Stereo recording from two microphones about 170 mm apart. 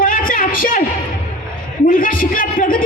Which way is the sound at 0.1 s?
55° left (ahead or behind).